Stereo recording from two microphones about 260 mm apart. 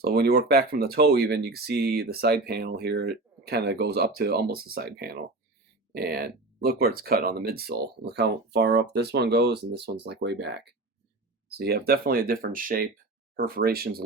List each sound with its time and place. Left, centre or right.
0.0 s speech: right